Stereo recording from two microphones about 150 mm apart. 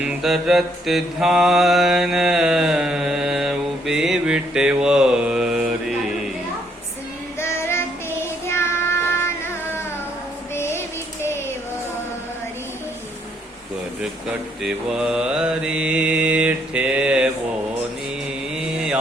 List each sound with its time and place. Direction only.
0.0 s mantra: 5° right (ahead or behind)
7.3 s child singing: 15° left (ahead or behind)
10.5 s female singing: 15° left (ahead or behind)
14.6 s mantra: 5° right (ahead or behind)
18.5 s mantra: 5° right (ahead or behind)